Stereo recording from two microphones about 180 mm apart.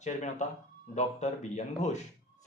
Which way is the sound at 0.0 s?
40° left (ahead or behind).